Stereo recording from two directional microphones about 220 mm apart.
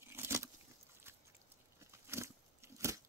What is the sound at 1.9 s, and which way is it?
Biting, 10° right (ahead or behind).